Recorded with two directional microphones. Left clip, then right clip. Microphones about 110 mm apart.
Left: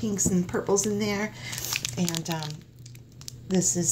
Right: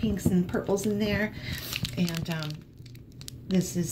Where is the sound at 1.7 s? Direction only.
85° left.